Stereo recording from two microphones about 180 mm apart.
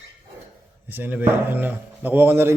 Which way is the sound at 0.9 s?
10° right (ahead or behind).